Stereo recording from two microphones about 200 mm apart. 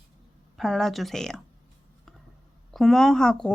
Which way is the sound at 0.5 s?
Centre (ahead or behind).